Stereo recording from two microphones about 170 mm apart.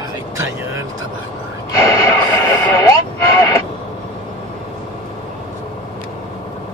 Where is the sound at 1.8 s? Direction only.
15° left (ahead or behind).